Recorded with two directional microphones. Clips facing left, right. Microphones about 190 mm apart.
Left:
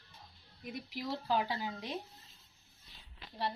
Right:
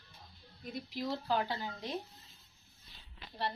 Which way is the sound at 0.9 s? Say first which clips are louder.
Even; 10° left (ahead or behind).